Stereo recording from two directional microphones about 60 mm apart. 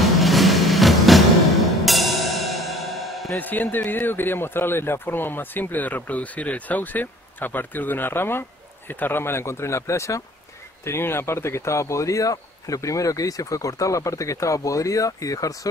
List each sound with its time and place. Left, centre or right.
0.0 s vehicle: centre
1.9 s music: centre
3.3 s a man's voice: left
10.9 s a man's voice: left